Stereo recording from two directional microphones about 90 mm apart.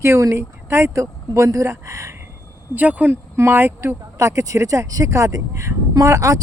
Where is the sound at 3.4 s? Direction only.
30° right (ahead or behind).